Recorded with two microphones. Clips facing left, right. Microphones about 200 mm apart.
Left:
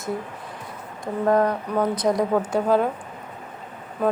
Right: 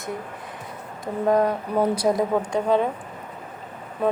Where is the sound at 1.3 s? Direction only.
Centre (ahead or behind).